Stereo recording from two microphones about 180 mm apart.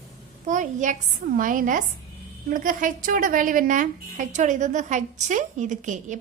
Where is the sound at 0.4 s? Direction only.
45° right (ahead or behind).